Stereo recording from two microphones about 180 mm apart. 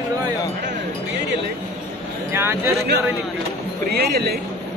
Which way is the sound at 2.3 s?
10° right (ahead or behind).